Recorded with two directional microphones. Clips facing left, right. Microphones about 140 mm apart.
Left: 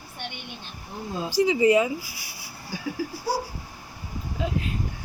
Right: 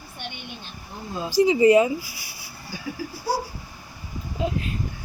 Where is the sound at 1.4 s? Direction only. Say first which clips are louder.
Right 4 dB; 35° right (ahead or behind).